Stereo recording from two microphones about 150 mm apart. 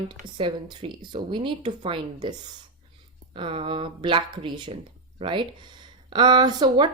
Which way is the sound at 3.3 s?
35° right (ahead or behind).